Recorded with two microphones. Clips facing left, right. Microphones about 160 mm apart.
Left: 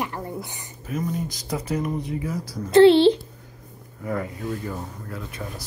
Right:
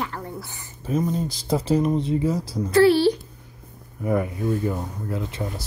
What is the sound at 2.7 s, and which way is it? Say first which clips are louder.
Speech: left 3 dB; 25° left (ahead or behind).